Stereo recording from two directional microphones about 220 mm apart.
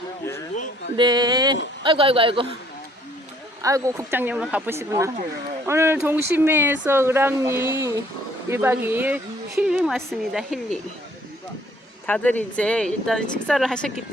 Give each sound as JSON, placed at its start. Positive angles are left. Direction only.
{"t": 0.9, "sound": "a man's voice", "side_deg": -20}
{"t": 3.6, "sound": "speech", "side_deg": -15}
{"t": 12.0, "sound": "speech", "side_deg": 5}